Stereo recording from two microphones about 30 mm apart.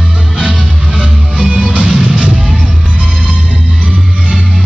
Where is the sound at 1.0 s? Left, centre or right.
Right.